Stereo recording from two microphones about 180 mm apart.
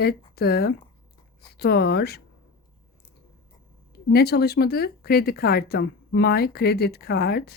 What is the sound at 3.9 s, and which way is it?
Speech, 60° left (ahead or behind).